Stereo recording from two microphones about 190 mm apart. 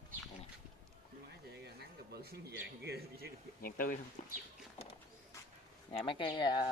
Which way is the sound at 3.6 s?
50° left (ahead or behind).